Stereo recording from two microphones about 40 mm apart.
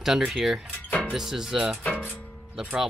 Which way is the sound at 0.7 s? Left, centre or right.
Left.